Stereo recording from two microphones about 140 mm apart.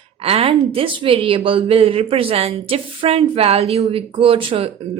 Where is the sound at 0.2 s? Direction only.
45° right (ahead or behind).